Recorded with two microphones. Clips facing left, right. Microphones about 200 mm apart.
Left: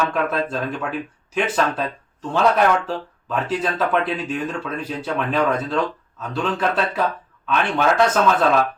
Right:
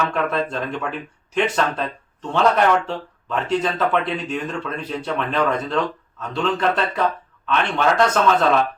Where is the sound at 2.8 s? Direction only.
5° left (ahead or behind).